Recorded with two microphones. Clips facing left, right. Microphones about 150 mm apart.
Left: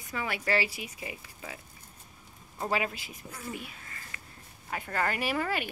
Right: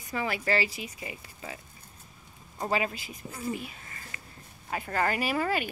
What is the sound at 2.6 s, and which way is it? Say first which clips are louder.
Speech: right 2 dB; centre (ahead or behind).